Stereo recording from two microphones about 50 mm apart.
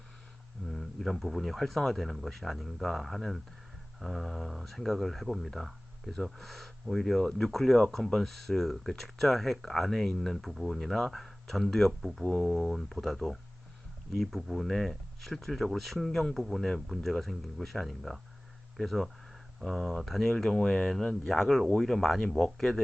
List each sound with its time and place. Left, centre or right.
0.7 s speech: centre
21.3 s speech: centre